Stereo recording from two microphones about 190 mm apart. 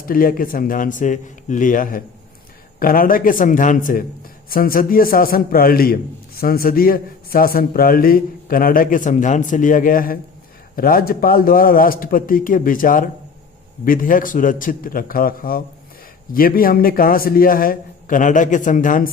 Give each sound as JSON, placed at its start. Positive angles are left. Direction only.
{"t": 0.0, "sound": "a man's voice", "side_deg": 50}